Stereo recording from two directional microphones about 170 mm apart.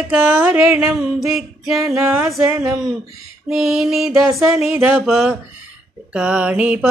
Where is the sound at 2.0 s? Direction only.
15° right (ahead or behind).